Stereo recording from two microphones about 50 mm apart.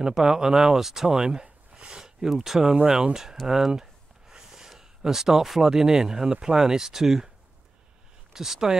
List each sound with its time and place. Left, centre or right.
0.0 s speech: centre
2.7 s speech: centre
8.3 s speech: centre